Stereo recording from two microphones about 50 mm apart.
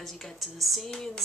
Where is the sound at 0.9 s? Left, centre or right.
Centre.